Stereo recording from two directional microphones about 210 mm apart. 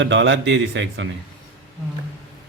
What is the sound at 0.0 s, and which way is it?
Speech, 60° right (ahead or behind).